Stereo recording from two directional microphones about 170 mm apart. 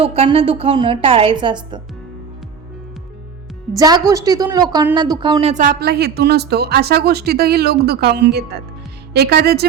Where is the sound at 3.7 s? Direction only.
20° right (ahead or behind).